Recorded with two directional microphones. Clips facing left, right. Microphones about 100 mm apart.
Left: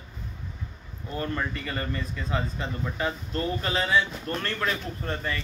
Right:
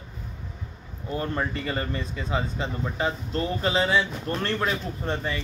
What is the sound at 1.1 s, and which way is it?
A man's voice, 20° right (ahead or behind).